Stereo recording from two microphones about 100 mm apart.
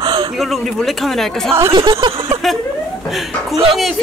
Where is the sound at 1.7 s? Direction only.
60° right (ahead or behind).